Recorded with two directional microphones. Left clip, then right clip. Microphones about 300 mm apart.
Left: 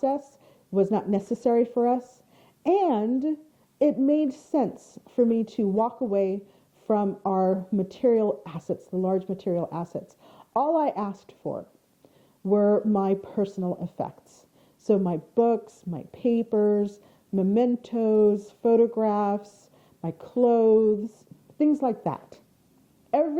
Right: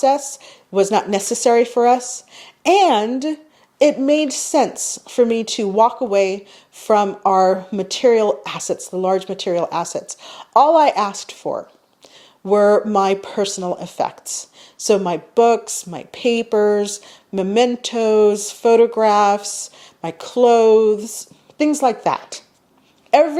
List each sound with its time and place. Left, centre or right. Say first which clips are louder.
0.0 s speech: right 11 dB; centre
11.4 s speech: right 9 dB; centre